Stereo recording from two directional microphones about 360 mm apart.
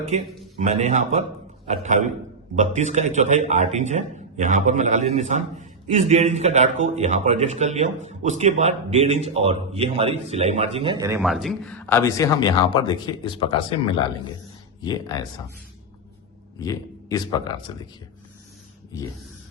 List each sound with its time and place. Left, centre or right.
0.6 s a man's voice: centre
16.6 s a man's voice: centre